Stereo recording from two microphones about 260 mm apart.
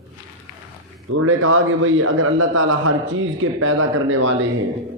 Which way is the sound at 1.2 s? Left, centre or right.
Right.